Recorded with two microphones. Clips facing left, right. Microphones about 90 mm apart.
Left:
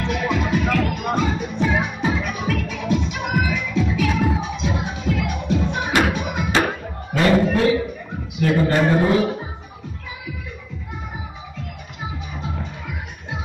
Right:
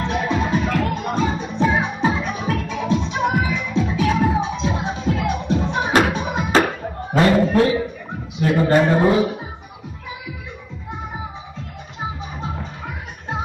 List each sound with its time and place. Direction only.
0.0 s music: 30° right (ahead or behind)
7.1 s a sound: 30° right (ahead or behind)
8.4 s a man's voice: 25° right (ahead or behind)
12.0 s music: 35° right (ahead or behind)